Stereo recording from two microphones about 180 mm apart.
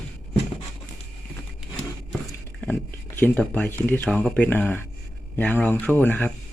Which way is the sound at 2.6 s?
10° left (ahead or behind).